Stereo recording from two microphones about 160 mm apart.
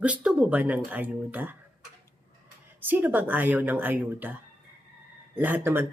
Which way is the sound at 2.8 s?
10° right (ahead or behind).